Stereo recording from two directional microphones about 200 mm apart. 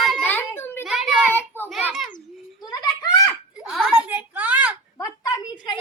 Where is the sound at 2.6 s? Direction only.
20° left (ahead or behind).